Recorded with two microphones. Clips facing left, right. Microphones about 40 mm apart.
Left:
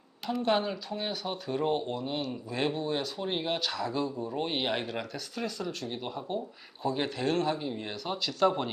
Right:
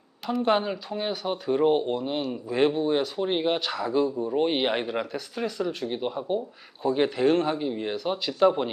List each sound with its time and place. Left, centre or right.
0.4 s speech: centre